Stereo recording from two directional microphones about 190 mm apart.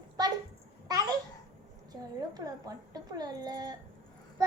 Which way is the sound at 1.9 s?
20° right (ahead or behind).